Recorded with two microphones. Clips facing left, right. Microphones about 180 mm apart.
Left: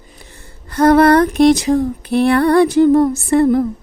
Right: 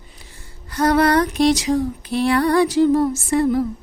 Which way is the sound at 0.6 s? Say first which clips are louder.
Left 6 dB; 55° left (ahead or behind).